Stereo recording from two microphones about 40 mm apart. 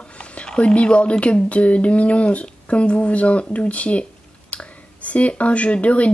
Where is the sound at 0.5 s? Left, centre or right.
Left.